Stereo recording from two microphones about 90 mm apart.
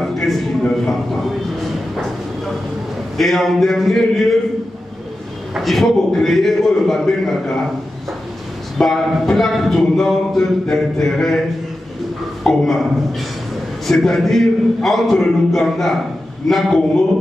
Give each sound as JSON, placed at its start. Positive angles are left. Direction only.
{"t": 0.0, "sound": "a sound", "side_deg": 5}
{"t": 3.2, "sound": "speech", "side_deg": 0}
{"t": 5.5, "sound": "speech", "side_deg": 0}
{"t": 8.7, "sound": "speech", "side_deg": 5}
{"t": 12.4, "sound": "speech", "side_deg": 5}